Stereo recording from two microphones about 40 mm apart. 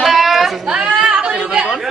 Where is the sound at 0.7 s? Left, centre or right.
Right.